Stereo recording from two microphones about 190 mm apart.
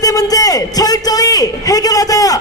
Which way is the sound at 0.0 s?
20° left (ahead or behind).